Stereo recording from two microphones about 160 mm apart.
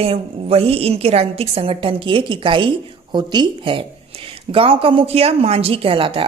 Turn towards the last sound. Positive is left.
turn(degrees=-35)  # may be behind; listen again after turning